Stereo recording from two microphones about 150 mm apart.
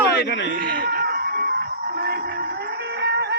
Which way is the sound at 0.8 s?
90° right.